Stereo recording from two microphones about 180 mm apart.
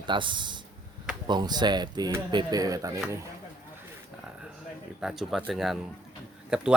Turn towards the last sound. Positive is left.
turn(degrees=-5)  # may be behind; listen again after turning